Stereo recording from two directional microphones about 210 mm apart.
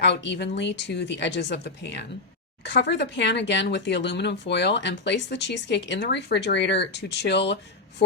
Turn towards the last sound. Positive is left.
turn(degrees=55)  # may be behind; listen again after turning